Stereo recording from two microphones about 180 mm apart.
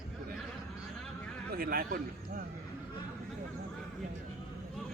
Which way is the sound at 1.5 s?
55° right (ahead or behind).